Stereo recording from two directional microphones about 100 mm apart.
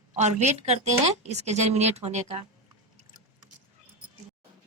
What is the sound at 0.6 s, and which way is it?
A woman's voice, 90° right.